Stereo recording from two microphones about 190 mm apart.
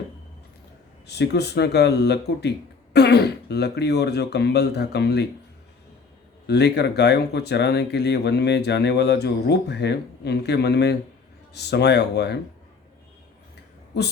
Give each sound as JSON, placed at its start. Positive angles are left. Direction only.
{"t": 1.0, "sound": "speech", "side_deg": 60}
{"t": 6.5, "sound": "speech", "side_deg": 60}